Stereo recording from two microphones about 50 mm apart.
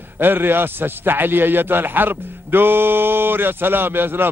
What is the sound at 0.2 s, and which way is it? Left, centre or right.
A man's voice, right.